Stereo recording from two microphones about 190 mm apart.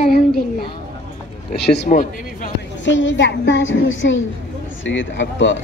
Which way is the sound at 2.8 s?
75° left (ahead or behind).